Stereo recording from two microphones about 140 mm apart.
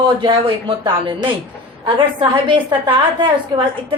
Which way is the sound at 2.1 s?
35° right (ahead or behind).